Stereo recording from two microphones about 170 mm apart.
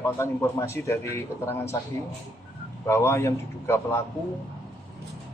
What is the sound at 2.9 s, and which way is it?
A man's voice, 15° left (ahead or behind).